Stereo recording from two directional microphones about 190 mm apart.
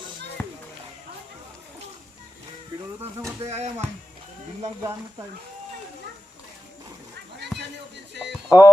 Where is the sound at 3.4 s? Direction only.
35° right (ahead or behind).